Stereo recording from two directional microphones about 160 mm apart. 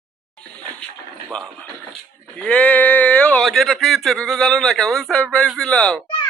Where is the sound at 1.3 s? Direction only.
5° left (ahead or behind).